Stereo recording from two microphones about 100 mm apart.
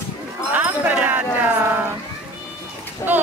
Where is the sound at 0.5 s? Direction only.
15° right (ahead or behind).